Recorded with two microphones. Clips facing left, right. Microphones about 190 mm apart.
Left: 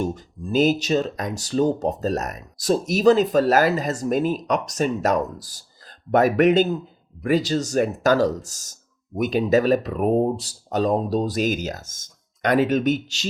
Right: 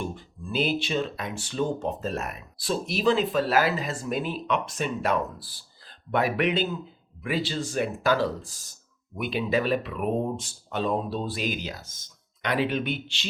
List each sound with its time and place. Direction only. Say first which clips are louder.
0.0 s speech: left 7 dB; 40° left (ahead or behind)